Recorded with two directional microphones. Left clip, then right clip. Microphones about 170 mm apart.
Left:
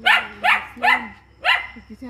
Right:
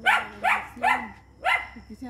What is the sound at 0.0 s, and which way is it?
Dog, 60° right (ahead or behind).